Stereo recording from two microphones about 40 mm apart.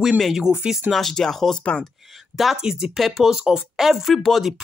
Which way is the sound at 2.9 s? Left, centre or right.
Centre.